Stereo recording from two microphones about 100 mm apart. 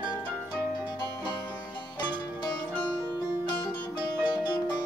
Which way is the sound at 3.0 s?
50° left (ahead or behind).